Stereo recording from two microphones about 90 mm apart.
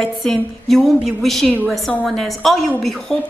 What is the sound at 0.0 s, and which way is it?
A woman's voice, centre (ahead or behind).